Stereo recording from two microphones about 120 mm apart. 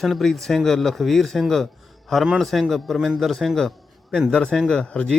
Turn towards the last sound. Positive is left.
turn(degrees=5)  # may be behind; listen again after turning